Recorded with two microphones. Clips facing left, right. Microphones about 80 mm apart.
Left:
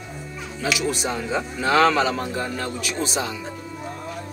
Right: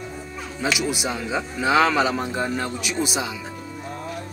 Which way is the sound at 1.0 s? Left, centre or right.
Centre.